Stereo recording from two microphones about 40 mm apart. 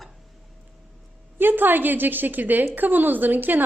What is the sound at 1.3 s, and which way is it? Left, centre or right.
A woman's voice, right.